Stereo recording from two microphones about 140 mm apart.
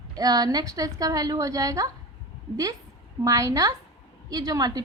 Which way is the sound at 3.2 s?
25° right (ahead or behind).